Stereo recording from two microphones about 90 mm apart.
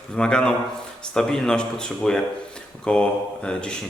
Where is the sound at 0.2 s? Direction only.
10° left (ahead or behind).